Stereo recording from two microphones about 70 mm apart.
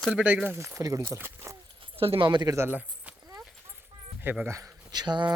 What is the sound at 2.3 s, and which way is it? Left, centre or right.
Speech, right.